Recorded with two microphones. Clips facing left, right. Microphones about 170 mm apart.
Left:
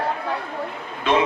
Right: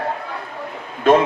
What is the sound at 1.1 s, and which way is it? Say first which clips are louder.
Speech: right 7 dB; 45° right (ahead or behind).